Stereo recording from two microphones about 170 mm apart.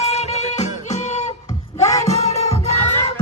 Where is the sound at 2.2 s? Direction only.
40° left (ahead or behind).